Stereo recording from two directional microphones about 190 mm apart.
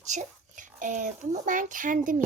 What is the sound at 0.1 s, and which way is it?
A child's voice, 40° right (ahead or behind).